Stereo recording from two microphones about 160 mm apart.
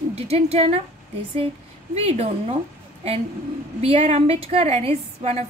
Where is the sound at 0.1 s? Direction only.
40° right (ahead or behind).